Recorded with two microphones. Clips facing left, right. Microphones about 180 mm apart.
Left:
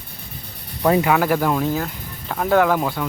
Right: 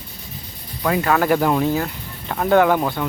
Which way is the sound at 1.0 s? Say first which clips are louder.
Right 1 dB; 5° left (ahead or behind).